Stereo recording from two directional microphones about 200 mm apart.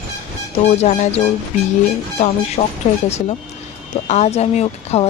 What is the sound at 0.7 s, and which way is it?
Speech, 35° left (ahead or behind).